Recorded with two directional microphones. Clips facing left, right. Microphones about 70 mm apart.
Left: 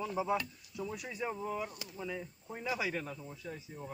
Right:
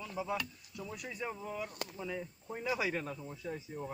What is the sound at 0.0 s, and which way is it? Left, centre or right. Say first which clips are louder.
Speech: left 4 dB; centre.